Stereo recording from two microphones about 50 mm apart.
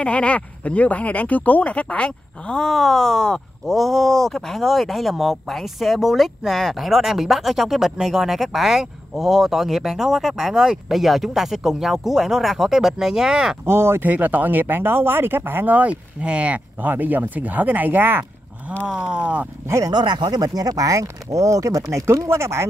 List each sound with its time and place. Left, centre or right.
0.0 s speech: left
2.7 s speech: centre
13.7 s speech: right
14.0 s speech: right
15.7 s speech: right
16.9 s speech: right
18.9 s speech: centre
20.7 s speech: right